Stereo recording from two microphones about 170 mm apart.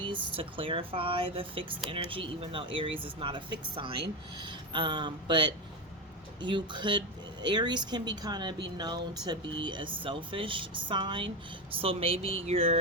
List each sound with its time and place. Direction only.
0.0 s speech: 30° right (ahead or behind)